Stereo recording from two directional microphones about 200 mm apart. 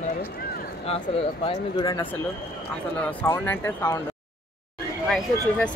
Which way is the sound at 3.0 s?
10° left (ahead or behind).